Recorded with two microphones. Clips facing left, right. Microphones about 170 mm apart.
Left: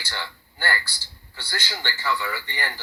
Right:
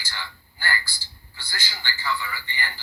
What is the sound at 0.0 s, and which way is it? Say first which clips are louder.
A man's voice: left 4 dB; 65° left (ahead or behind).